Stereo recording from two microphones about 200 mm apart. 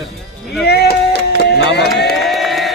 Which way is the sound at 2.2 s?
Centre (ahead or behind).